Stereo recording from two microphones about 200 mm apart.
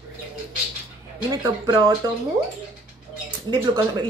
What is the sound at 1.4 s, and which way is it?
Speech, 20° right (ahead or behind).